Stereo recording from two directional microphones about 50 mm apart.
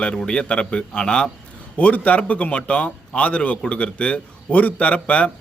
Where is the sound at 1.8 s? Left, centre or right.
Left.